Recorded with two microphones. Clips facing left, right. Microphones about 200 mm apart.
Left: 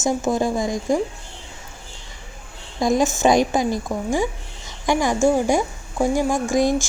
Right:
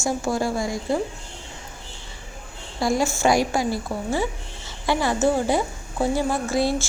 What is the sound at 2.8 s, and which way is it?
A woman's voice, 20° left (ahead or behind).